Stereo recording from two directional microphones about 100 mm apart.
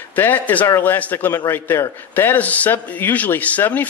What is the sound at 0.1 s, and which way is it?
A man's voice, 20° left (ahead or behind).